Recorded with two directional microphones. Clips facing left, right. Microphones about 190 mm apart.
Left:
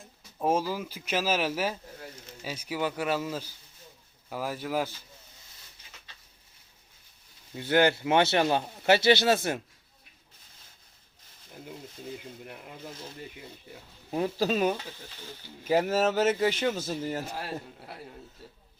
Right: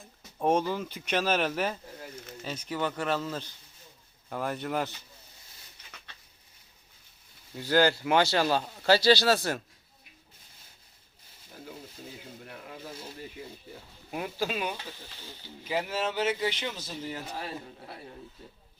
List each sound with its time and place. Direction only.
0.0 s speech: centre (ahead or behind)
7.5 s speech: 20° left (ahead or behind)
14.1 s speech: 35° left (ahead or behind)
17.2 s speech: 10° left (ahead or behind)